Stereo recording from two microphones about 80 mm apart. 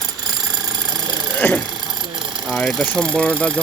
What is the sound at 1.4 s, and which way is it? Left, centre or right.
Speech, left.